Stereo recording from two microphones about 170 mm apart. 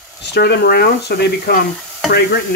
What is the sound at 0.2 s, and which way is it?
Speech, 75° left (ahead or behind).